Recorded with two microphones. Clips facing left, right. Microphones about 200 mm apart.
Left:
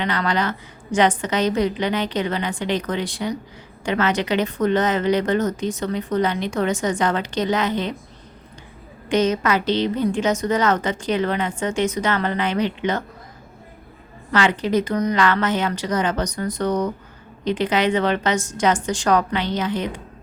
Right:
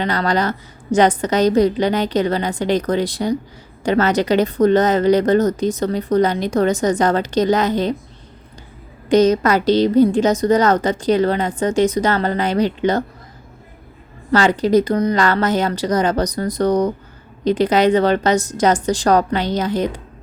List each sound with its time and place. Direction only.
0.0 s a woman's voice: 40° right (ahead or behind)
9.0 s a woman's voice: 40° right (ahead or behind)
14.3 s a woman's voice: 40° right (ahead or behind)